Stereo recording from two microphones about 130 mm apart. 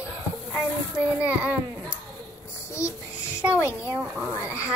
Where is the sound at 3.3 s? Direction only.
10° right (ahead or behind).